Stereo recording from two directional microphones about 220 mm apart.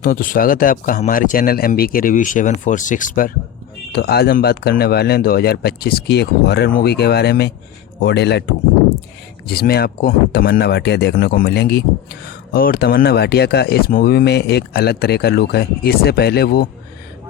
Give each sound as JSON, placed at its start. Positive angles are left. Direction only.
{"t": 0.0, "sound": "speech", "side_deg": 40}
{"t": 9.5, "sound": "speech", "side_deg": 45}